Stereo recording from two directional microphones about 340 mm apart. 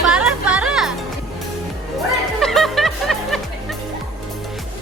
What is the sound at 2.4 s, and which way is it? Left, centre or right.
Music, centre.